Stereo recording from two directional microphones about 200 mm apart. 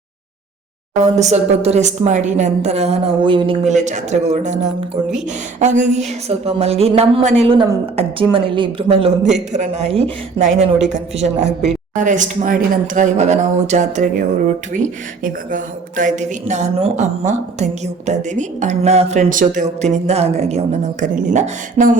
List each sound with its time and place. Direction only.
1.1 s speech: 35° right (ahead or behind)
11.4 s a woman's voice: centre (ahead or behind)
11.9 s speech: 40° right (ahead or behind)